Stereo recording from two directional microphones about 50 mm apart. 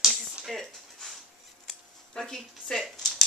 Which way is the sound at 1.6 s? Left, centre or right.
Centre.